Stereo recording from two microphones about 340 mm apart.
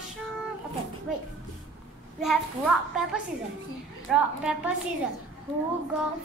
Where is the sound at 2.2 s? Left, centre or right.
Centre.